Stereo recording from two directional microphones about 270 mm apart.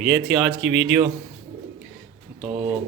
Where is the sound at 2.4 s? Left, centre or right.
Right.